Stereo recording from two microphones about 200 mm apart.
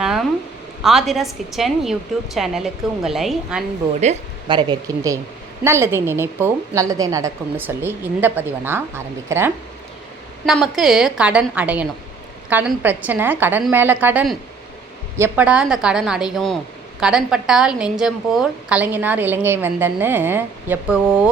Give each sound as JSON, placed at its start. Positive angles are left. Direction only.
{"t": 0.0, "sound": "a sound", "side_deg": 0}
{"t": 0.8, "sound": "a woman's voice", "side_deg": 0}
{"t": 4.4, "sound": "a woman's voice", "side_deg": -20}
{"t": 10.4, "sound": "a woman's voice", "side_deg": 0}